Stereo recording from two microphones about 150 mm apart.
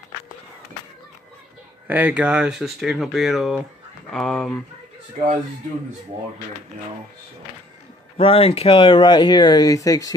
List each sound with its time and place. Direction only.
1.9 s speech: 10° right (ahead or behind)
5.1 s speech: 50° right (ahead or behind)
8.2 s speech: 40° left (ahead or behind); by 10.1 s 25° left (ahead or behind)